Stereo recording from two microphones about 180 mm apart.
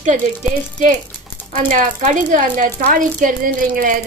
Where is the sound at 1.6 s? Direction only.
45° right (ahead or behind).